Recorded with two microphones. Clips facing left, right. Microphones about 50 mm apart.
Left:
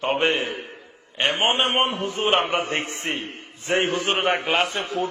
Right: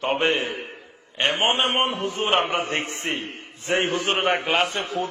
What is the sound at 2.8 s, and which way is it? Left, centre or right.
Speech, right.